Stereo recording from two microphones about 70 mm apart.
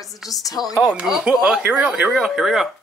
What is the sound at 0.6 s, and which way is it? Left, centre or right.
Speech, centre.